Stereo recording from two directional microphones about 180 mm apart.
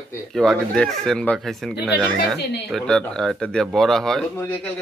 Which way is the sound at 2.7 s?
5° left (ahead or behind).